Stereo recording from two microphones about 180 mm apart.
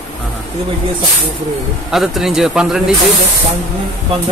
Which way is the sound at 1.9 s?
Centre (ahead or behind).